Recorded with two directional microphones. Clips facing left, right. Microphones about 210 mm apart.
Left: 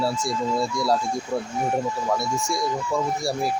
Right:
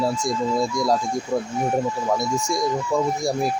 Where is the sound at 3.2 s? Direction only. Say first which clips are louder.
Right 3 dB; 15° right (ahead or behind).